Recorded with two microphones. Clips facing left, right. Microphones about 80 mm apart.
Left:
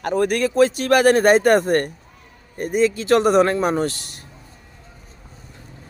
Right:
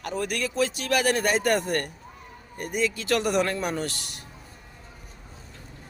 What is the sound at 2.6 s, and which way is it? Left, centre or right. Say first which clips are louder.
Speech: left 9 dB; left.